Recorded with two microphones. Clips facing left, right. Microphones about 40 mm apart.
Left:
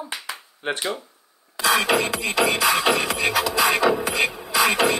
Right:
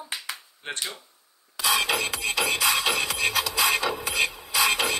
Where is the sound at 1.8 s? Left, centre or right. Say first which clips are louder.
Left 5 dB; left.